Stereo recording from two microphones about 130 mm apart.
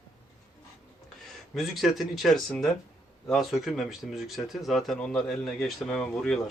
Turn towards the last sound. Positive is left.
turn(degrees=5)  # may be behind; listen again after turning